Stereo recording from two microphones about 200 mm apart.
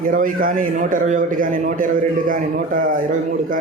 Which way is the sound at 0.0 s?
45° right (ahead or behind).